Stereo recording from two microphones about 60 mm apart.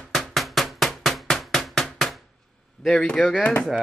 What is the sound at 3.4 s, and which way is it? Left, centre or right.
Speech, left.